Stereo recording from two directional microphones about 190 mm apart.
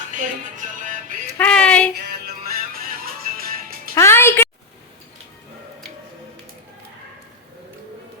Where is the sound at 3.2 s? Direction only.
50° right (ahead or behind).